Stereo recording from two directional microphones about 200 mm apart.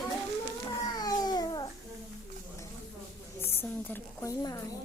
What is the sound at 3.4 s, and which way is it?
A woman's voice, 10° left (ahead or behind).